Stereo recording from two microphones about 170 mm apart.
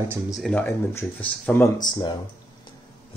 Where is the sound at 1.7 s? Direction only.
25° left (ahead or behind).